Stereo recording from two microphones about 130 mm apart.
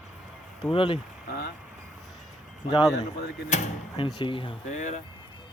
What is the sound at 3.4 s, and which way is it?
Speech, 60° left (ahead or behind).